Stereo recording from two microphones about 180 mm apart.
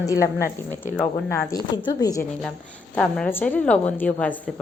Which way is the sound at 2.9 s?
5° left (ahead or behind).